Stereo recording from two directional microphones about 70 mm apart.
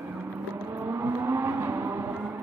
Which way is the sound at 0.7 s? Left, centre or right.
Right.